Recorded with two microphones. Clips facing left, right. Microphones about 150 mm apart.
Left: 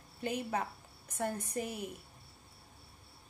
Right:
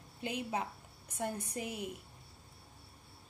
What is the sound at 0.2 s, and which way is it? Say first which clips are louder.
A woman's voice: left 2 dB; 15° right (ahead or behind).